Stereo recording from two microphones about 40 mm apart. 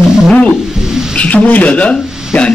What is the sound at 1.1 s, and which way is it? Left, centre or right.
Speech, left.